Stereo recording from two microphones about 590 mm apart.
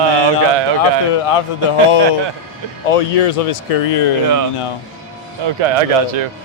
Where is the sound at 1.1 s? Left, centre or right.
Left.